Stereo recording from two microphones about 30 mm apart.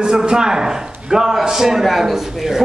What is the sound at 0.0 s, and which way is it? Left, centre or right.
A man's voice, right.